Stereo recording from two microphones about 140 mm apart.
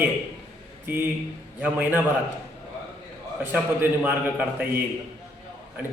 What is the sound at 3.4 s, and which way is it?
A man's voice, 15° right (ahead or behind).